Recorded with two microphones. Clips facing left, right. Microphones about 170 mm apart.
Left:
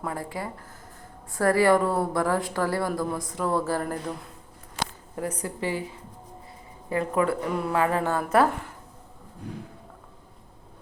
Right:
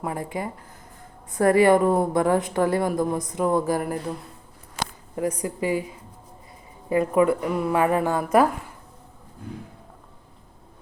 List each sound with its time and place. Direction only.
0.0 s a woman's voice: 20° right (ahead or behind)
4.8 s a sound: 10° right (ahead or behind)
5.4 s a woman's voice: 15° right (ahead or behind)
6.9 s a woman's voice: 15° right (ahead or behind)